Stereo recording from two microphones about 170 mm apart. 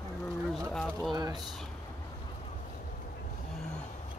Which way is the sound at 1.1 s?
20° right (ahead or behind).